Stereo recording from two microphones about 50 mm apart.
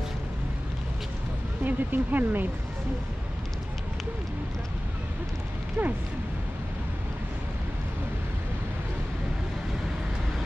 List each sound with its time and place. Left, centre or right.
1.6 s speech: right
5.8 s speech: right